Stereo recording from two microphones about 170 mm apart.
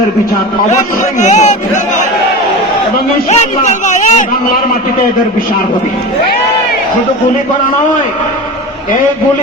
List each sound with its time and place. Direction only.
1.2 s a man's voice: 45° left (ahead or behind)
3.2 s a man's voice: 40° left (ahead or behind)